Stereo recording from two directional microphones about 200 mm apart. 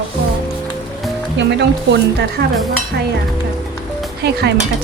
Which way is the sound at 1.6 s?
60° right (ahead or behind).